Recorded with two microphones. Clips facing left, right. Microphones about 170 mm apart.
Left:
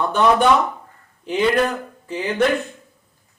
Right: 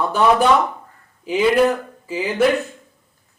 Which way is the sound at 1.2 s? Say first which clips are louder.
Right 3 dB; 5° right (ahead or behind).